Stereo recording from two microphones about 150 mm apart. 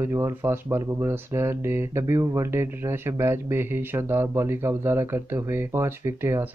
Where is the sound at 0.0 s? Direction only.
15° right (ahead or behind).